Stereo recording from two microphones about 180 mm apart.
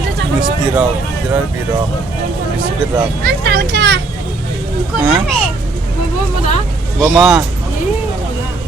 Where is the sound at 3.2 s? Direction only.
60° right (ahead or behind).